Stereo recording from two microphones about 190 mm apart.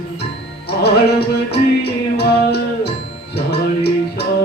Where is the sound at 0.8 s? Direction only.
60° left (ahead or behind).